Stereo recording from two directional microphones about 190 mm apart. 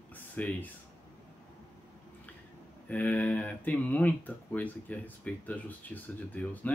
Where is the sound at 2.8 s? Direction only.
10° left (ahead or behind).